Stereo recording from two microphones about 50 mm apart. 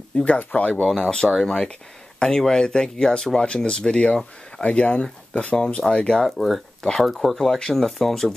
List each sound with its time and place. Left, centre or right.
0.1 s speech: left
0.9 s speech: centre
6.2 s speech: centre
6.8 s speech: centre
7.1 s speech: centre